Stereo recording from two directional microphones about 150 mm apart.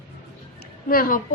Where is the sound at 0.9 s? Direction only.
70° left (ahead or behind).